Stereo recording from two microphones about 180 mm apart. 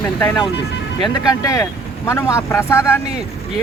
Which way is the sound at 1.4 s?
20° left (ahead or behind).